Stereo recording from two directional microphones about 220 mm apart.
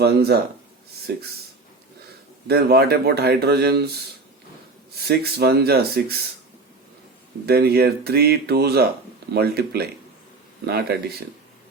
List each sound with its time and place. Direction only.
0.0 s speech: 45° right (ahead or behind)
2.5 s speech: 45° right (ahead or behind)
5.0 s speech: 45° right (ahead or behind)
7.4 s speech: 45° right (ahead or behind)